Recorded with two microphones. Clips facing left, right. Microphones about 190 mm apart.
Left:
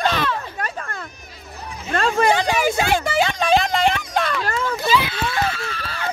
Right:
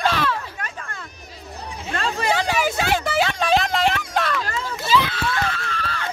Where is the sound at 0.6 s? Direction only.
40° left (ahead or behind).